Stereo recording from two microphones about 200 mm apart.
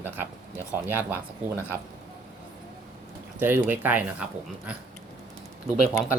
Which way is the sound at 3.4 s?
10° right (ahead or behind).